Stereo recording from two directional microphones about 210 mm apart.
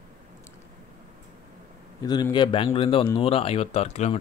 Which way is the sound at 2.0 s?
20° left (ahead or behind).